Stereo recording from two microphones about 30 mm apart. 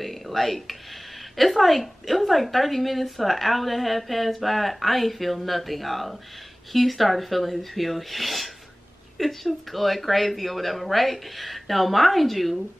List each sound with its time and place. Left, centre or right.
0.0 s a woman's voice: centre